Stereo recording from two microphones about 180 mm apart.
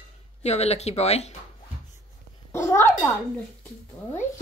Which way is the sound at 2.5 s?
15° left (ahead or behind).